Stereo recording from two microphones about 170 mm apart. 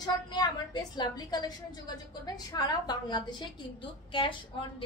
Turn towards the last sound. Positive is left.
turn(degrees=30)  # may be behind; listen again after turning